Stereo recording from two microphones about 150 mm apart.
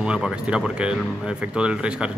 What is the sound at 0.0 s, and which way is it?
Speech, 5° right (ahead or behind).